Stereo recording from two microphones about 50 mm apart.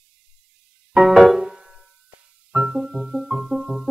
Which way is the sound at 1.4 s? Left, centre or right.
Centre.